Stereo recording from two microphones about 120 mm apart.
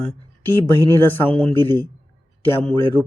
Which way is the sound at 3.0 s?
15° right (ahead or behind).